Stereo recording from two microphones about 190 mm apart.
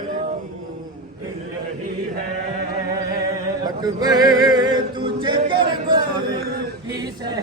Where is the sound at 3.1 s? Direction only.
20° right (ahead or behind).